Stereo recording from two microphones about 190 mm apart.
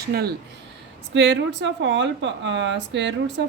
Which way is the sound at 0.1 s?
55° right (ahead or behind).